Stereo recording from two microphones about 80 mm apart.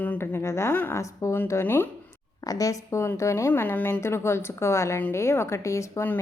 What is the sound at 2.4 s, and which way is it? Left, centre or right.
A woman's voice, left.